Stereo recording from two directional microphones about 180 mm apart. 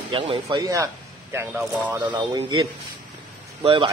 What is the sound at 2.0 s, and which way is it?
Speech, 25° right (ahead or behind).